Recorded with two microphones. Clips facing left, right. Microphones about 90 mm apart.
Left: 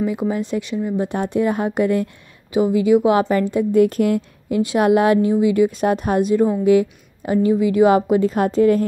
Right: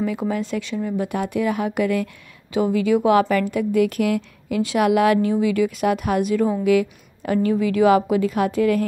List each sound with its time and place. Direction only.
0.0 s a woman's voice: 20° left (ahead or behind)
2.5 s a woman's voice: 20° left (ahead or behind)